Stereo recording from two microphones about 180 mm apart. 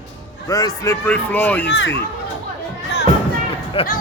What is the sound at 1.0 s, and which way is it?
Speech, 10° left (ahead or behind).